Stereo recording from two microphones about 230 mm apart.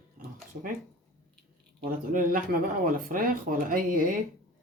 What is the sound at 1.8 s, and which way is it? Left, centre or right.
Speech, right.